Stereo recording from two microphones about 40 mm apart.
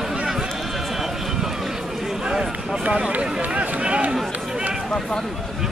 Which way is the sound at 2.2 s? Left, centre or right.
Right.